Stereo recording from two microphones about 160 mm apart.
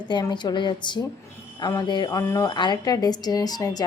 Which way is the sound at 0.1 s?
25° left (ahead or behind).